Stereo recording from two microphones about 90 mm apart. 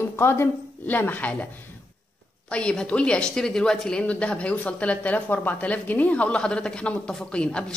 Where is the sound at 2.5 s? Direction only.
10° left (ahead or behind).